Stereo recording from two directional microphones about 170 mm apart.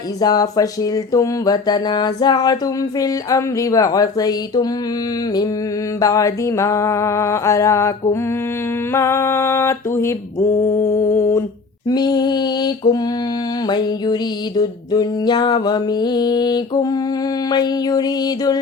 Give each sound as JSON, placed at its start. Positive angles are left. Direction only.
{"t": 0.2, "sound": "music", "side_deg": 20}
{"t": 6.0, "sound": "a sound", "side_deg": 20}
{"t": 11.9, "sound": "music", "side_deg": 25}